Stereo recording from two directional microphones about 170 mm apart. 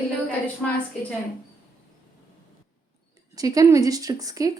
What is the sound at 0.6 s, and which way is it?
Speech, 10° left (ahead or behind).